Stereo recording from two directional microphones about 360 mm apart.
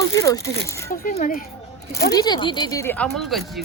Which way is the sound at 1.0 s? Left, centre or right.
Left.